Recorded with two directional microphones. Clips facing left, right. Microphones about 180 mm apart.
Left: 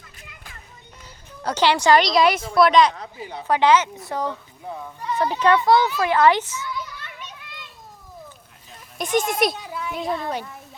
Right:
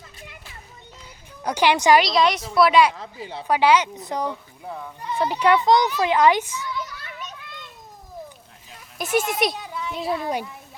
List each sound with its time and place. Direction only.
1.5 s a woman's voice: 15° right (ahead or behind)
2.0 s a woman's voice: centre (ahead or behind)
9.0 s a child's voice: 5° right (ahead or behind)